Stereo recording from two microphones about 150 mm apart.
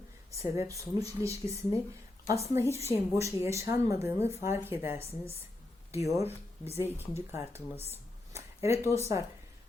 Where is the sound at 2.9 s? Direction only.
20° right (ahead or behind).